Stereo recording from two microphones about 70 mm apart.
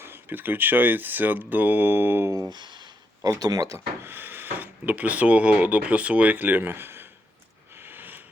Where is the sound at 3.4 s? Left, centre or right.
Right.